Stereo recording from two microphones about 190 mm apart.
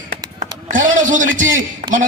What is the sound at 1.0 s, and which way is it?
Speech, 45° right (ahead or behind).